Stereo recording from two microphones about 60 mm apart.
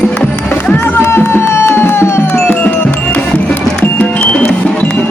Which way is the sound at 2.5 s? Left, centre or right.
Left.